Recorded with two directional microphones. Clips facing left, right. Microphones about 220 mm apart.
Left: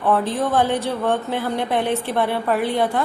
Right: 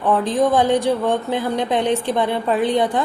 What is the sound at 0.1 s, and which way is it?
A woman's voice, 15° right (ahead or behind).